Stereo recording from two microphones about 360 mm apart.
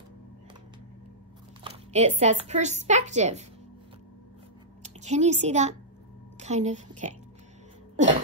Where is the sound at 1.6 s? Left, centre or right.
Centre.